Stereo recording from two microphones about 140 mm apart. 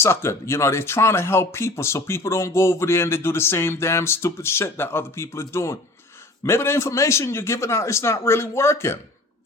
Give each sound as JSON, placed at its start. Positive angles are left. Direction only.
{"t": 0.0, "sound": "speech", "side_deg": 20}